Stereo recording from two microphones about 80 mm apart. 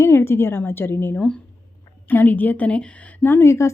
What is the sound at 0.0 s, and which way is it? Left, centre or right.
A woman's voice, left.